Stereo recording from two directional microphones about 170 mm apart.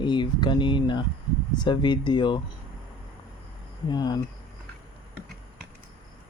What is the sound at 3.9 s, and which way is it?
Speech, 25° left (ahead or behind).